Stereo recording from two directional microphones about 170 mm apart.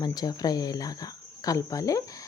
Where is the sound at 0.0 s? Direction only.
25° left (ahead or behind).